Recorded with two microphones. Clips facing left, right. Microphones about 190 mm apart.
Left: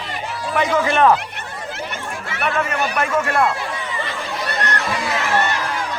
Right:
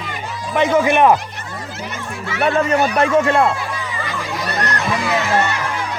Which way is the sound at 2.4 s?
35° right (ahead or behind).